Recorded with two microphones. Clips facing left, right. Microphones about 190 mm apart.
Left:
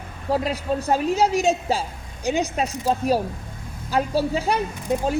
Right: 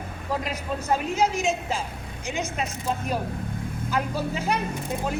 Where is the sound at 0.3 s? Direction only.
30° left (ahead or behind).